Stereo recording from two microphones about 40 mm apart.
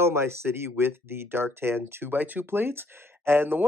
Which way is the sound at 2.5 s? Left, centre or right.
Right.